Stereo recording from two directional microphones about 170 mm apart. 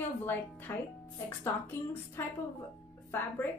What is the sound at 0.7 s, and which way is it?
A woman's voice, 15° left (ahead or behind).